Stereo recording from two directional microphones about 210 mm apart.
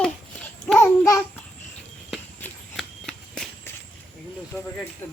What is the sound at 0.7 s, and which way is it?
Babbling, 15° left (ahead or behind).